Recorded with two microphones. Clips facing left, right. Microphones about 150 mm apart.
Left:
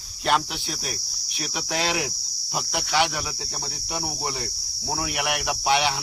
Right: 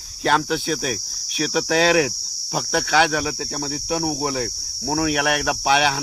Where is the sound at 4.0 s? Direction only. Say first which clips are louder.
Right 6 dB; 80° right.